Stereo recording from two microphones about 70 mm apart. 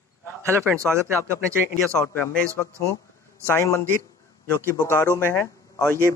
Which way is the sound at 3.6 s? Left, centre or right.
Left.